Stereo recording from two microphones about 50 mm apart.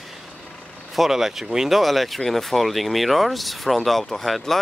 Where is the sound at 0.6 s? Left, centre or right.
Left.